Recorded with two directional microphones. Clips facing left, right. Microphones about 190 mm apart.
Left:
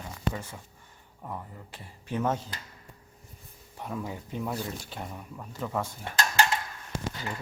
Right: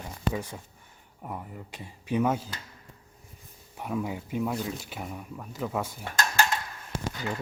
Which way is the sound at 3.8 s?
10° right (ahead or behind).